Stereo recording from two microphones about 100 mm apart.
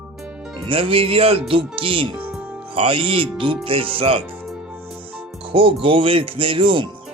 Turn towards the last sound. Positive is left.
turn(degrees=-60)  # may be behind; listen again after turning